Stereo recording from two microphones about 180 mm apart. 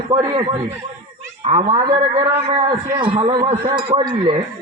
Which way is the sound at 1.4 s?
40° right (ahead or behind).